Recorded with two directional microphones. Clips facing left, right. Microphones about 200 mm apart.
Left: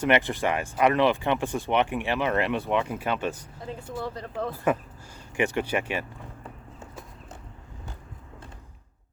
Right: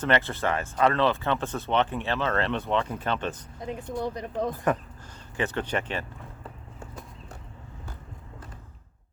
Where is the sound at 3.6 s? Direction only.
15° right (ahead or behind).